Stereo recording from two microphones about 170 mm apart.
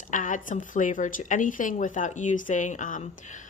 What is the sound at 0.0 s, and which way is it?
Speech, 50° left (ahead or behind).